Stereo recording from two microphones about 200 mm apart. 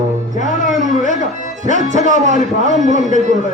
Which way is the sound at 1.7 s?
40° right (ahead or behind).